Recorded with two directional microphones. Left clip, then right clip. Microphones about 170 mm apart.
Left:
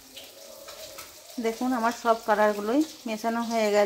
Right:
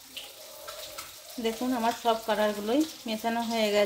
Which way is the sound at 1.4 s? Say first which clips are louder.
Left 2 dB; 25° left (ahead or behind).